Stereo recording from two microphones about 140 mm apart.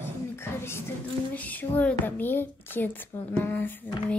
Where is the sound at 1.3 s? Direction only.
10° left (ahead or behind).